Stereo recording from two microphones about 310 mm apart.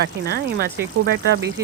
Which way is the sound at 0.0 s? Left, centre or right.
Right.